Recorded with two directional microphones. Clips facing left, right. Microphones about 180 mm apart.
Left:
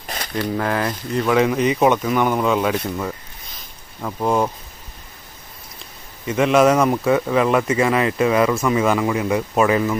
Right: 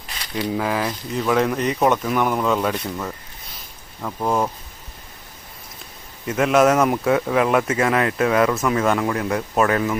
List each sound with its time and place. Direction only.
0.5 s speech: 5° right (ahead or behind)
6.2 s speech: centre (ahead or behind)